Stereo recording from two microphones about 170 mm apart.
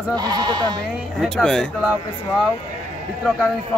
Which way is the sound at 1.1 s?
5° left (ahead or behind).